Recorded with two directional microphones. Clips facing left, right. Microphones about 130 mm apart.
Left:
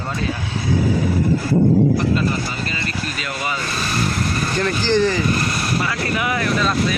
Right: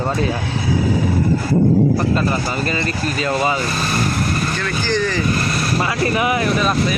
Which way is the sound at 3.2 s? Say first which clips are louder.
Right 11 dB; 30° right (ahead or behind).